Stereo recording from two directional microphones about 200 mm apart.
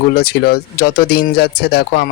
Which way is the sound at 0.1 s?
50° left (ahead or behind).